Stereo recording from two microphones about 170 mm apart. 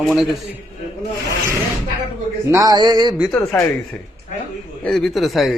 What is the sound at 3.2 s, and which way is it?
Speech, centre (ahead or behind).